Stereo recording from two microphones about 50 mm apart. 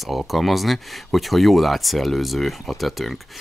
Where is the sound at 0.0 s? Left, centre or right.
Centre.